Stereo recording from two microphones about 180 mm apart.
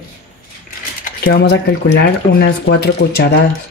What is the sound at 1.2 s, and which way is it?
Speech, 65° left (ahead or behind).